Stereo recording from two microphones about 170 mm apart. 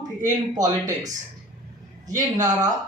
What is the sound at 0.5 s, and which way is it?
Speech, 20° right (ahead or behind).